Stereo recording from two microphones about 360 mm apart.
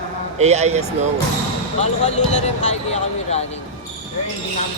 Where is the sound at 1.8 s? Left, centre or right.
Centre.